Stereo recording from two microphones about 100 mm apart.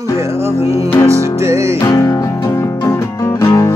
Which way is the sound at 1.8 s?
35° left (ahead or behind).